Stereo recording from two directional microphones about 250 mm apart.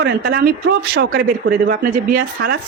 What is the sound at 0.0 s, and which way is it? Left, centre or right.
Speech, right.